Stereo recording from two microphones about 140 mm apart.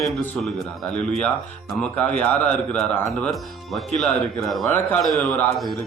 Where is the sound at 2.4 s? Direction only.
10° left (ahead or behind).